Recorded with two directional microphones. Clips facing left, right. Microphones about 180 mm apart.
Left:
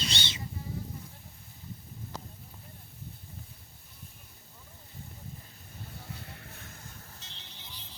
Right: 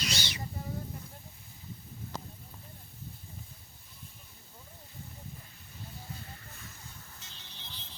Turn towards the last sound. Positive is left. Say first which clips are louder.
# left 2 dB
turn(degrees=60)  # may be behind; listen again after turning